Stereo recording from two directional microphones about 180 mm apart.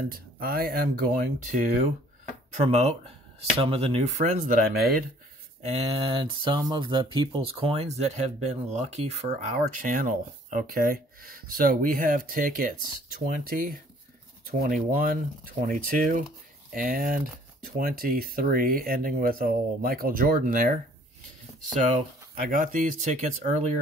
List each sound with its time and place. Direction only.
0.1 s speech: 55° right (ahead or behind)
5.6 s speech: 35° right (ahead or behind)
22.3 s speech: 50° right (ahead or behind)